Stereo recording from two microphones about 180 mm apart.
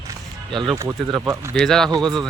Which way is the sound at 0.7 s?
15° right (ahead or behind).